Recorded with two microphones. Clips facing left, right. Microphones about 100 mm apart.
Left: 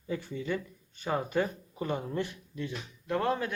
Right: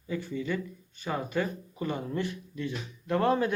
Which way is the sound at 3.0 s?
Centre (ahead or behind).